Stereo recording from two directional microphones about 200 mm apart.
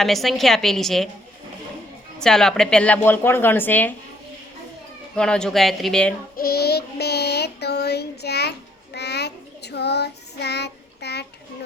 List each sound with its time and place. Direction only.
0.0 s a woman's voice: centre (ahead or behind)
2.1 s speech: 5° left (ahead or behind)
5.1 s a woman's voice: 5° left (ahead or behind)
6.3 s child singing: 50° left (ahead or behind)